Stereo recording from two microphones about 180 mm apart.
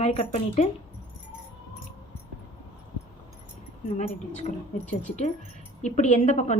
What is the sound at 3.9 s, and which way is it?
A woman's voice, 40° left (ahead or behind).